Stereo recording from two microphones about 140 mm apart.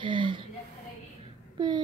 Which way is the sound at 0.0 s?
35° right (ahead or behind).